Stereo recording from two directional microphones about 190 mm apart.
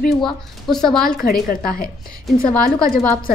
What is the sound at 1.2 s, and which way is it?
A woman's voice, 50° left (ahead or behind).